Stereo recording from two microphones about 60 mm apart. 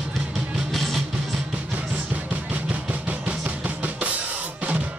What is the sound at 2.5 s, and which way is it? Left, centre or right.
Drum kit, right.